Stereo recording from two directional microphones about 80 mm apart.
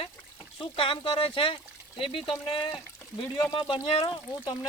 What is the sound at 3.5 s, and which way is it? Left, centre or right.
Speech, left.